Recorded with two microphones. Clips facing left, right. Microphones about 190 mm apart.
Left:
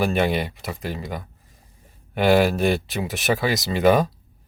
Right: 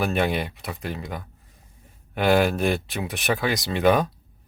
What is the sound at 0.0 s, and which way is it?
Speech, centre (ahead or behind).